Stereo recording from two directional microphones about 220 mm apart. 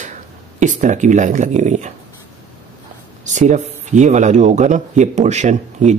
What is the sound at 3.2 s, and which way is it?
Speech, 35° right (ahead or behind).